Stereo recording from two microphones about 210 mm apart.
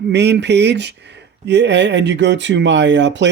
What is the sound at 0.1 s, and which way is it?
Speech, 55° right (ahead or behind).